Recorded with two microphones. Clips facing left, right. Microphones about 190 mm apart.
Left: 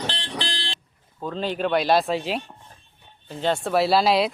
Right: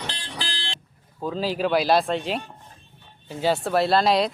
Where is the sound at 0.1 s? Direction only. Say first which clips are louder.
Left 4 dB; 30° left (ahead or behind).